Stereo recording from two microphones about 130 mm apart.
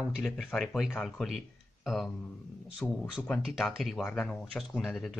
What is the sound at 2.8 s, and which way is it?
Speech, 10° left (ahead or behind).